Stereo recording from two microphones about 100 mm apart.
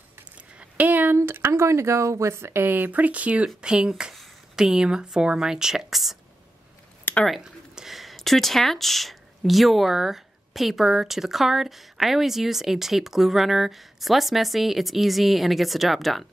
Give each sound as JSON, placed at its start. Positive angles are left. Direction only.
{"t": 0.6, "sound": "a sound", "side_deg": -15}
{"t": 1.1, "sound": "speech", "side_deg": -25}
{"t": 7.2, "sound": "speech", "side_deg": -5}